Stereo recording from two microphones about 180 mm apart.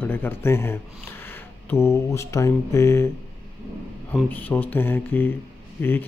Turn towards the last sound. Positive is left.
turn(degrees=10)  # may be behind; listen again after turning